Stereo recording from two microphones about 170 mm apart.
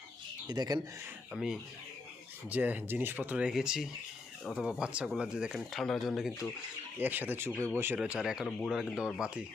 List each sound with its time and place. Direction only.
0.4 s speech: 25° right (ahead or behind)
1.3 s speech: centre (ahead or behind)